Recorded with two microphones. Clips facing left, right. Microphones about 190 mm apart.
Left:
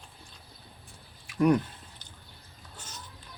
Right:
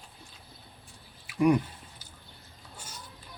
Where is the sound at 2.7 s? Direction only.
10° right (ahead or behind).